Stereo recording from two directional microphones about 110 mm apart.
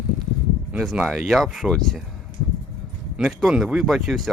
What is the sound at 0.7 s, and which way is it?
Speech, centre (ahead or behind).